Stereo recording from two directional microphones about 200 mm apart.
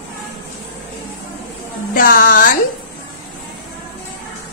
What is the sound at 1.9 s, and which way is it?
Speech, 45° left (ahead or behind).